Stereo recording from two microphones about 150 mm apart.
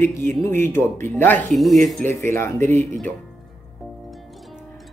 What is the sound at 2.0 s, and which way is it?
Speech, 15° left (ahead or behind).